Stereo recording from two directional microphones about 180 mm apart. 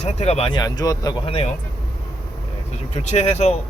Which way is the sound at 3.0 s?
40° left (ahead or behind).